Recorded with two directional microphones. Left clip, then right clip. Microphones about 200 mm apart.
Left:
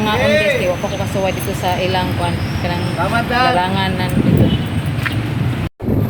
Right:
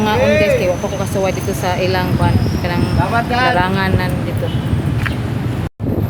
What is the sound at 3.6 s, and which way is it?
Speech, 5° right (ahead or behind).